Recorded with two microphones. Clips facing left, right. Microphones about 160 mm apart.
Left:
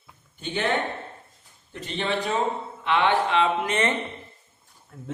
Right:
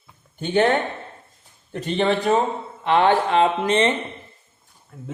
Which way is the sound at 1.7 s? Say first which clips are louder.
Right 7 dB; 50° right (ahead or behind).